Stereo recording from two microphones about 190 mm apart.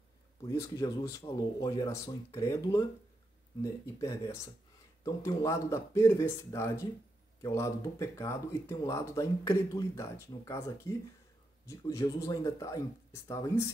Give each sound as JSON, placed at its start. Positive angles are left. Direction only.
{"t": 0.5, "sound": "speech", "side_deg": 15}